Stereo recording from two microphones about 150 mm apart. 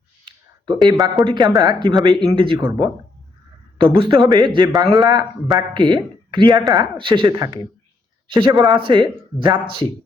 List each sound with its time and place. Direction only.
0.3 s a sound: 30° right (ahead or behind)
1.2 s a man's voice: 30° right (ahead or behind)
3.8 s a man's voice: 35° right (ahead or behind)